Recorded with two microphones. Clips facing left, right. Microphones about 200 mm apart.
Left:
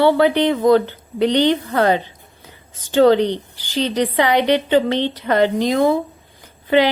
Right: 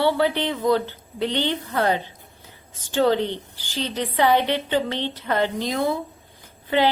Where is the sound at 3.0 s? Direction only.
80° left.